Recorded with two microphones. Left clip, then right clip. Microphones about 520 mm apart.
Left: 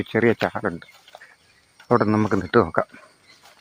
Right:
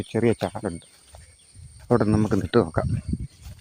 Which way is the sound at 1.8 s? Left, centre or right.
Right.